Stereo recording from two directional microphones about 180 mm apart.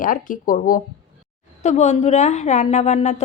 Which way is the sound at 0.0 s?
50° left (ahead or behind).